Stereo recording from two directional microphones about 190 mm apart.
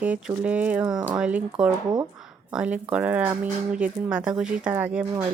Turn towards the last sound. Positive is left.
turn(degrees=-10)  # may be behind; listen again after turning